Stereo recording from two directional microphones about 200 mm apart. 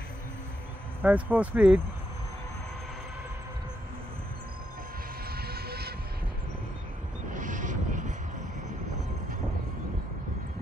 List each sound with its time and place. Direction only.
1.0 s speech: 10° right (ahead or behind)
5.3 s vehicle: 50° right (ahead or behind)
7.3 s vehicle: 40° right (ahead or behind)